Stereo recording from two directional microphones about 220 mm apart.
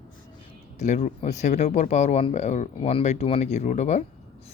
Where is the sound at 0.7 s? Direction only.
30° left (ahead or behind).